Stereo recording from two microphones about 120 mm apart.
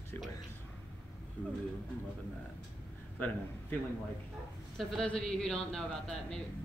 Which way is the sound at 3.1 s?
15° left (ahead or behind).